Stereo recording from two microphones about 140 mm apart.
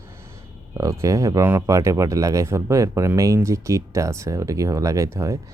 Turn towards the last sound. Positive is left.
turn(degrees=-20)  # may be behind; listen again after turning